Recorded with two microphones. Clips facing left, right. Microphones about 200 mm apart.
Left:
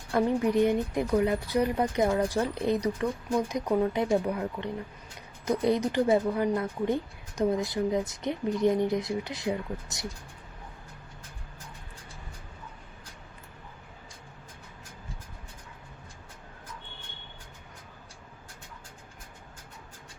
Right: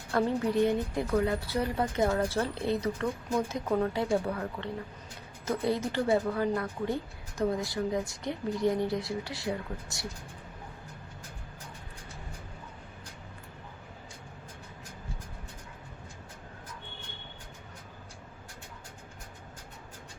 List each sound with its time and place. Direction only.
0.1 s a woman's voice: 15° left (ahead or behind)